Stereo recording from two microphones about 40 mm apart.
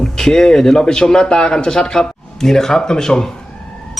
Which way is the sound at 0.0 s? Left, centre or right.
Centre.